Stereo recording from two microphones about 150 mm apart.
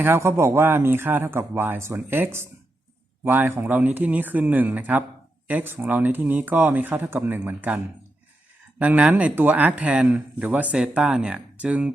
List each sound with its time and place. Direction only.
0.0 s speech: 15° right (ahead or behind)
8.8 s speech: 10° right (ahead or behind)